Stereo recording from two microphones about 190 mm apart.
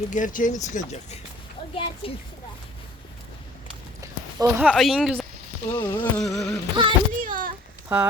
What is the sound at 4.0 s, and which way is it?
Walk, 15° right (ahead or behind).